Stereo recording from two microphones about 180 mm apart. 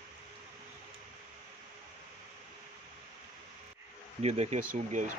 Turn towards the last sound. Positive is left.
turn(degrees=-45)  # may be behind; listen again after turning